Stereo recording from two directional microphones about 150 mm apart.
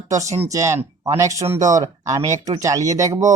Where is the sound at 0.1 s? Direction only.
20° right (ahead or behind).